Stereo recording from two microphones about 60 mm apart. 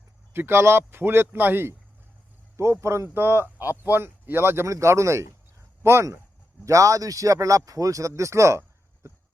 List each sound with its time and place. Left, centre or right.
0.3 s a man's voice: right
2.6 s a man's voice: right
3.2 s a man's voice: right
4.6 s speech: right
6.7 s speech: right